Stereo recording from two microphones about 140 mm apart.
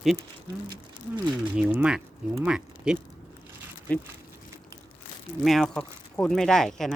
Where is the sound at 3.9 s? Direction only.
10° left (ahead or behind).